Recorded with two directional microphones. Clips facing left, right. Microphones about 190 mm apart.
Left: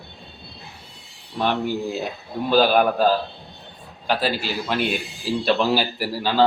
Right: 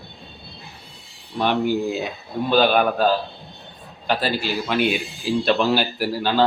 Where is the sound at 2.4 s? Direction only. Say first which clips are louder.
Even; centre (ahead or behind).